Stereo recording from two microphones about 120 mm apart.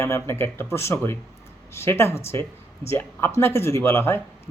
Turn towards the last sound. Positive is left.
turn(degrees=20)  # may be behind; listen again after turning